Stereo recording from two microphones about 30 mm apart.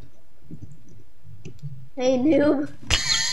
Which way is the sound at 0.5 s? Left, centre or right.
Right.